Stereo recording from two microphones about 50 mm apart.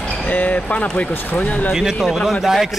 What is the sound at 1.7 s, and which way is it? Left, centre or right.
Speech, centre.